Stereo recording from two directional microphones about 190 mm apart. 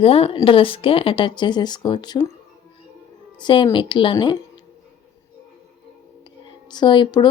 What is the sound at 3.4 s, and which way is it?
Speech, 25° left (ahead or behind).